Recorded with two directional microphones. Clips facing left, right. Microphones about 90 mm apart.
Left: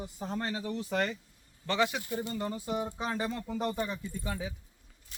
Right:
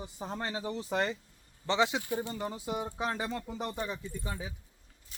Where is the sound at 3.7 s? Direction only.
Centre (ahead or behind).